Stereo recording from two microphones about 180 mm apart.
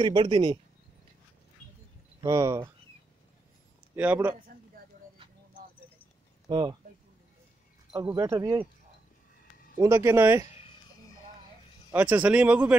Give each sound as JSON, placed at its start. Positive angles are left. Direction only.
{"t": 0.0, "sound": "speech", "side_deg": -25}
{"t": 2.2, "sound": "speech", "side_deg": -20}
{"t": 3.9, "sound": "speech", "side_deg": -10}
{"t": 6.4, "sound": "speech", "side_deg": -20}
{"t": 7.9, "sound": "speech", "side_deg": -20}
{"t": 9.8, "sound": "speech", "side_deg": -15}
{"t": 10.5, "sound": "a sound", "side_deg": 35}
{"t": 11.9, "sound": "speech", "side_deg": -10}